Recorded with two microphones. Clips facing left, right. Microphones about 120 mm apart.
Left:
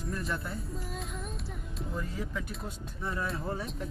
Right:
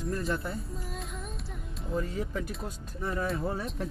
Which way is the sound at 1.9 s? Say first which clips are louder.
Right 6 dB; 40° right (ahead or behind).